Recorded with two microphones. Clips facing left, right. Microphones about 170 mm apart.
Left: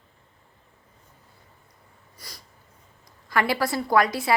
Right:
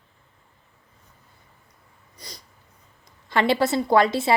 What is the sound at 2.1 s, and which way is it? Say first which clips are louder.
Sneeze: right 3 dB; 20° right (ahead or behind).